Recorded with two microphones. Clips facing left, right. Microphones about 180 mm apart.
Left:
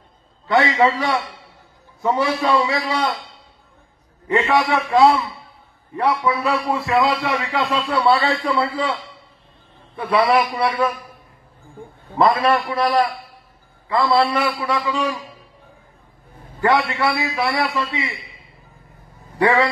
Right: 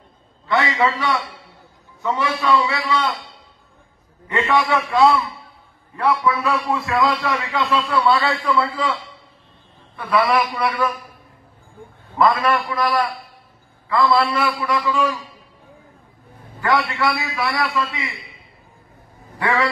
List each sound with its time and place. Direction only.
0.5 s a man's voice: 35° left (ahead or behind)
4.4 s a man's voice: 35° left (ahead or behind)
9.9 s a man's voice: 30° left (ahead or behind)
12.2 s a man's voice: 30° left (ahead or behind)
16.6 s a man's voice: 25° left (ahead or behind)
17.3 s a man's voice: 35° left (ahead or behind)
19.4 s a man's voice: 35° left (ahead or behind)